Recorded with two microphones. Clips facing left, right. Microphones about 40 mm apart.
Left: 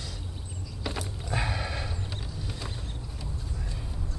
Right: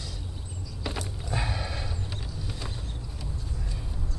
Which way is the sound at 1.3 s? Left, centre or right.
Centre.